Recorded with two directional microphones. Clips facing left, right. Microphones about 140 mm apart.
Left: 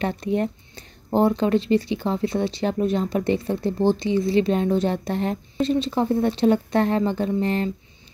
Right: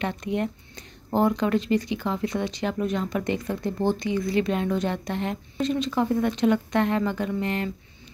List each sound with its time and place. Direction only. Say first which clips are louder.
0.0 s speech: left 4 dB; 35° left (ahead or behind)